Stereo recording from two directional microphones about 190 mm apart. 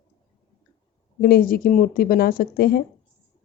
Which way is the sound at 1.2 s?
50° left (ahead or behind).